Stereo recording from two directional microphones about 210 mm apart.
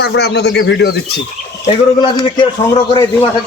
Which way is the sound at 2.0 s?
20° left (ahead or behind).